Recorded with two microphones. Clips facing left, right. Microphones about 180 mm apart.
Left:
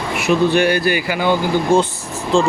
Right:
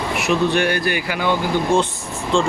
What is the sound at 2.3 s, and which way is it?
Speech, 40° left (ahead or behind).